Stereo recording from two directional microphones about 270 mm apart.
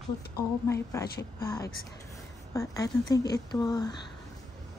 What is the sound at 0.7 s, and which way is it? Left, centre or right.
A woman's voice, centre.